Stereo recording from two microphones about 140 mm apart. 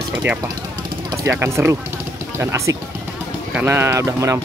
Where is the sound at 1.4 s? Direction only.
20° right (ahead or behind).